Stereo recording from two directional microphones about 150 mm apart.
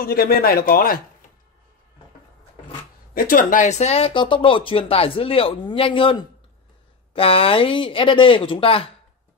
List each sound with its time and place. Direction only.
0.0 s speech: 85° left
3.2 s speech: 70° left (ahead or behind); by 8.9 s 40° left (ahead or behind)